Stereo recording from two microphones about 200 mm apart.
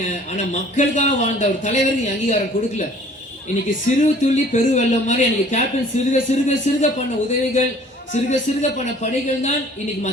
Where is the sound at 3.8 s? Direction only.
35° left (ahead or behind).